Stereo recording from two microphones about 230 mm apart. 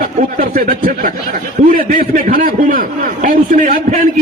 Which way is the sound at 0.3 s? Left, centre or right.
Right.